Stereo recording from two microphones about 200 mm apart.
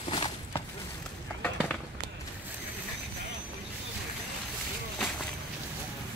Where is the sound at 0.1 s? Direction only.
25° left (ahead or behind).